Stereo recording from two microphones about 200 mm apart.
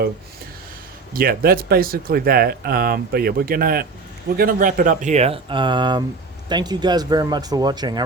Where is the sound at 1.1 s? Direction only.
45° right (ahead or behind).